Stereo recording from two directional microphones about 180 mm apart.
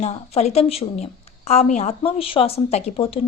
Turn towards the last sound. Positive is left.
turn(degrees=30)  # may be behind; listen again after turning